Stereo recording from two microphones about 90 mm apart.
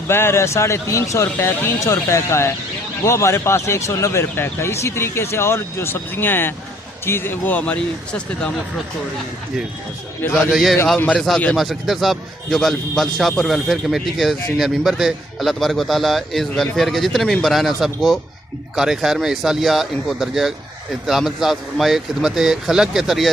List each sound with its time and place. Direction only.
0.1 s speech: 25° left (ahead or behind); by 8.5 s 10° left (ahead or behind)
10.5 s a man's voice: centre (ahead or behind)
10.9 s speech: 10° left (ahead or behind)
11.5 s a man's voice: centre (ahead or behind)